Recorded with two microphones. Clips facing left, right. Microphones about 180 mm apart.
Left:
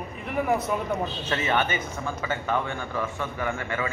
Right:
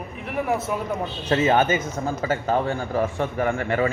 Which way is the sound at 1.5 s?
40° right (ahead or behind).